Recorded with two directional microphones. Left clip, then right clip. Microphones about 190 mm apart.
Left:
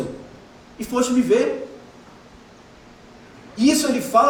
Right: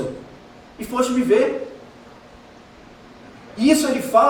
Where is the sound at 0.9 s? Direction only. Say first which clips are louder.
Right 1 dB; 25° left (ahead or behind).